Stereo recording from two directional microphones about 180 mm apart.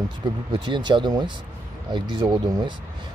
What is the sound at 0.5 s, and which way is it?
Speech, 25° right (ahead or behind).